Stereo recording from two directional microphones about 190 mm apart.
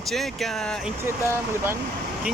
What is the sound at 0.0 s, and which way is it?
Speech, centre (ahead or behind).